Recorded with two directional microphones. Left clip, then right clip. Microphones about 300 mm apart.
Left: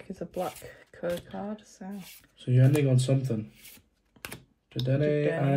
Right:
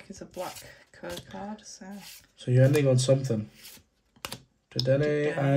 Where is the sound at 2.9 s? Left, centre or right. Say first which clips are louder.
Right 5 dB; right.